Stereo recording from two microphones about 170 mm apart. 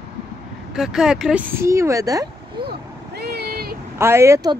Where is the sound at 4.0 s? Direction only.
15° right (ahead or behind).